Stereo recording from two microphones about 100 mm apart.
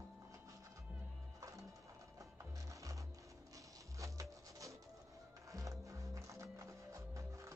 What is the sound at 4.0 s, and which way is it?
Music, 30° right (ahead or behind).